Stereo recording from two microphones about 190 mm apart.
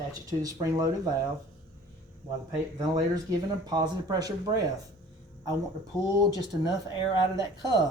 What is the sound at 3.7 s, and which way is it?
Speech, 20° right (ahead or behind).